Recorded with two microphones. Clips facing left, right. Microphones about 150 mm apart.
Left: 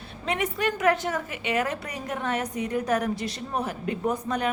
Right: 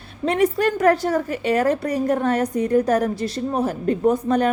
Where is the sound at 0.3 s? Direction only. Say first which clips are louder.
Right 8 dB; 35° right (ahead or behind).